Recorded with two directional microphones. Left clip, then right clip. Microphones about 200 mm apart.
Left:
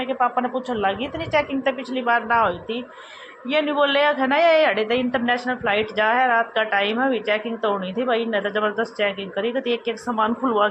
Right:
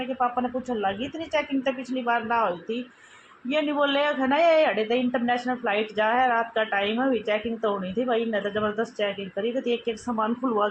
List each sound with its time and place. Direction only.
0.2 s a woman's voice: 20° left (ahead or behind)